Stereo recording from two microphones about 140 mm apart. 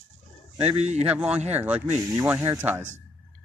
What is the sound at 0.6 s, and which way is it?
Speech, 50° right (ahead or behind).